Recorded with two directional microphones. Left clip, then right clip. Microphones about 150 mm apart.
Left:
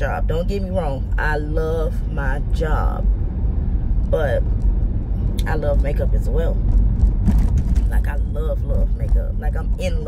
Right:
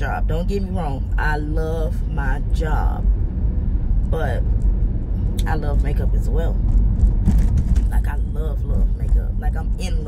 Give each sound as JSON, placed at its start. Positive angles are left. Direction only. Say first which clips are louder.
{"t": 0.0, "sound": "speech", "louder": "left 3 dB", "side_deg": 10}
{"t": 4.1, "sound": "speech", "louder": "left 6 dB", "side_deg": 15}
{"t": 5.4, "sound": "speech", "louder": "left 5 dB", "side_deg": 10}